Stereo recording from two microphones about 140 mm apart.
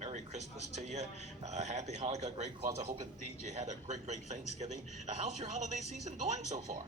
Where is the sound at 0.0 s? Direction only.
55° right (ahead or behind).